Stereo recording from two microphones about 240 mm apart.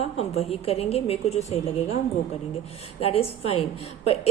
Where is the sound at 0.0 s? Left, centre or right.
Left.